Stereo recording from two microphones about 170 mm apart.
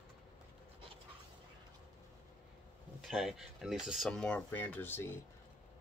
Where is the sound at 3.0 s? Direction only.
Centre (ahead or behind).